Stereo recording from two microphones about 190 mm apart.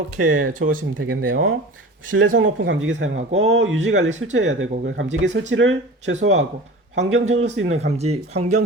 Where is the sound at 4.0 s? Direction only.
40° right (ahead or behind).